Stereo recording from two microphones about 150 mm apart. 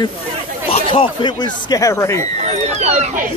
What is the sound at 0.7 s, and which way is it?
Speech, 35° left (ahead or behind).